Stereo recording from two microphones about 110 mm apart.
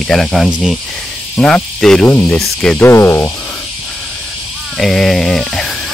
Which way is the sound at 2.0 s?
20° left (ahead or behind).